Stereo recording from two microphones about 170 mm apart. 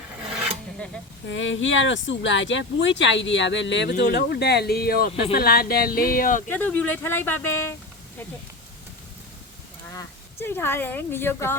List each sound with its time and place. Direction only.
1.3 s speech: 90° left
4.0 s speech: 70° left (ahead or behind); by 6.4 s 55° left (ahead or behind)
6.5 s speech: 10° left (ahead or behind)
9.9 s speech: 15° left (ahead or behind)